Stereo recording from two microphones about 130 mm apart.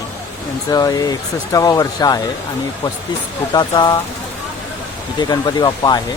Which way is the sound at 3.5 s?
35° left (ahead or behind).